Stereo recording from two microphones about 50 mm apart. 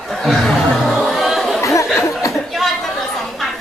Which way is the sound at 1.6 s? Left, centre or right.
Left.